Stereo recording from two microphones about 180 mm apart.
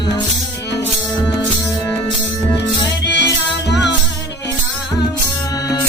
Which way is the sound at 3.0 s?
70° left (ahead or behind).